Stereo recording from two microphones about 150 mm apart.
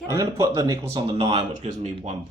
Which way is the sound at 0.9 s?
35° right (ahead or behind).